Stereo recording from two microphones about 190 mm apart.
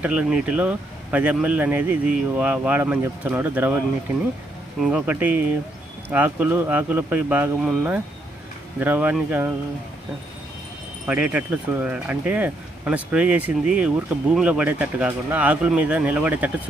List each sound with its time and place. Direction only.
0.0 s speech: 5° right (ahead or behind)
4.8 s speech: 10° right (ahead or behind)
11.1 s speech: 10° right (ahead or behind)